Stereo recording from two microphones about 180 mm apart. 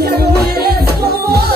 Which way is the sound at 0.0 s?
65° right (ahead or behind).